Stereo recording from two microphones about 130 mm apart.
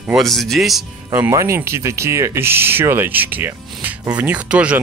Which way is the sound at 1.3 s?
20° right (ahead or behind).